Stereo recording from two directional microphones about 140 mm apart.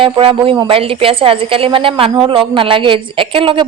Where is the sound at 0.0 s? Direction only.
40° right (ahead or behind).